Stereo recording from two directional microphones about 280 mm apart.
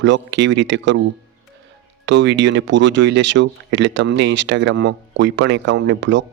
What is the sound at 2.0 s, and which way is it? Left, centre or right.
Speech, right.